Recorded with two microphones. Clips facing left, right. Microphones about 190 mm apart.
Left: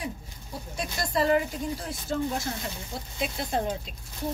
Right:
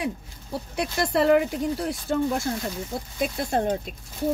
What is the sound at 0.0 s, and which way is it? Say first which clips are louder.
Speech: right 6 dB; 65° right (ahead or behind).